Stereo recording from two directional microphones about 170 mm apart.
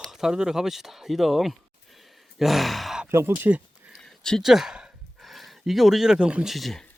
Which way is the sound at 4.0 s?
5° left (ahead or behind).